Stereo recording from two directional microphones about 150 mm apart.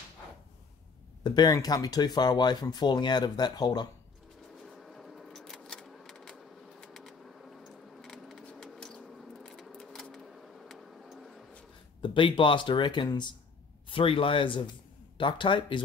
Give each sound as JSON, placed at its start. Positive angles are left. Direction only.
{"t": 1.2, "sound": "speech", "side_deg": 25}
{"t": 4.6, "sound": "a sound", "side_deg": 0}
{"t": 12.0, "sound": "speech", "side_deg": 35}